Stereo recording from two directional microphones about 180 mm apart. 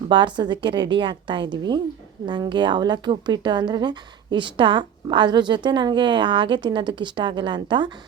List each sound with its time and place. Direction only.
0.1 s speech: 25° right (ahead or behind)